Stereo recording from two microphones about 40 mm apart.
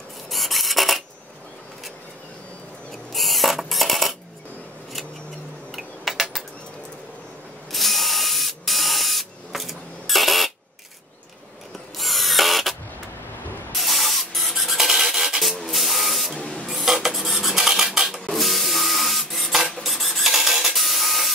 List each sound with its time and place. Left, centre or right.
0.3 s filing: centre
3.1 s coin: centre
5.8 s a sound: centre
7.7 s spray: centre
12.0 s ratchet: centre
13.7 s spray: centre
16.3 s printer: left
16.6 s dishes: centre
18.2 s printer: centre